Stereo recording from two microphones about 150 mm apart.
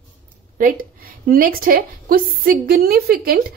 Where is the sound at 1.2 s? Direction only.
70° right (ahead or behind).